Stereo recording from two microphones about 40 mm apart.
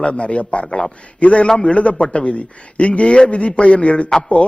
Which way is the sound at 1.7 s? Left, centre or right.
Left.